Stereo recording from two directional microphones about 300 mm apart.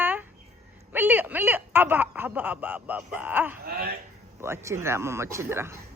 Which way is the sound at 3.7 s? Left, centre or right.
Right.